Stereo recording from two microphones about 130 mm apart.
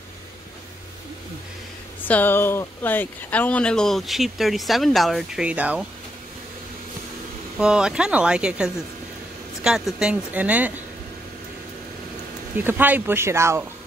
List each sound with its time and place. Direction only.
2.0 s speech: 15° left (ahead or behind); by 5.9 s 10° right (ahead or behind)
7.5 s speech: 5° right (ahead or behind)
12.5 s speech: 15° right (ahead or behind)